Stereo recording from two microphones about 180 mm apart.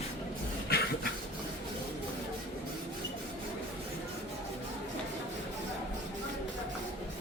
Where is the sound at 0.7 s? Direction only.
60° left (ahead or behind).